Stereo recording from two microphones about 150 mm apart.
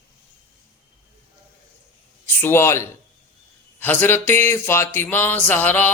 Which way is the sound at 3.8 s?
15° left (ahead or behind).